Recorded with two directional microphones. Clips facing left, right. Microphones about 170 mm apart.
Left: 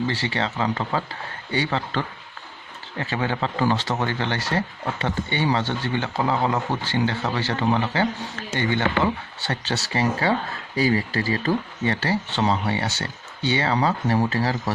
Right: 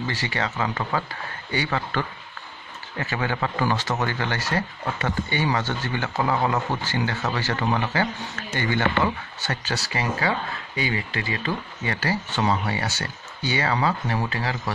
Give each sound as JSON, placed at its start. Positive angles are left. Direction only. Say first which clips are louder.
{"t": 0.0, "sound": "speech", "louder": "left 3 dB", "side_deg": 30}